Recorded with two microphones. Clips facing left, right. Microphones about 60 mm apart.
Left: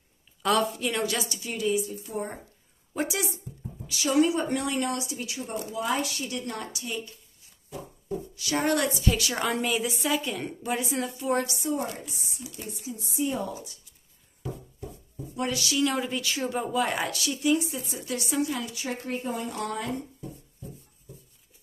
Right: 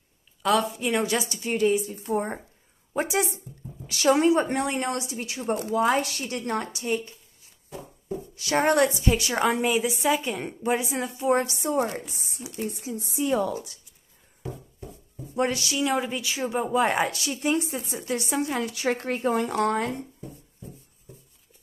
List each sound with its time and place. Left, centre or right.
0.4 s a woman's voice: centre
0.7 s a woman's voice: right
1.3 s a woman's voice: right
3.8 s a woman's voice: right
4.2 s a woman's voice: right
5.5 s a woman's voice: right
8.4 s a woman's voice: right
9.1 s a woman's voice: right
11.5 s a woman's voice: right
15.3 s a woman's voice: right
15.7 s speech: centre
16.7 s a woman's voice: right
18.7 s speech: right